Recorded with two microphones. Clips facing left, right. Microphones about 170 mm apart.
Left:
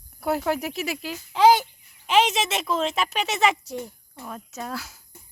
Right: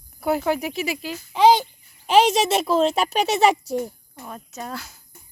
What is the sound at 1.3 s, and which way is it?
Speech, 20° right (ahead or behind).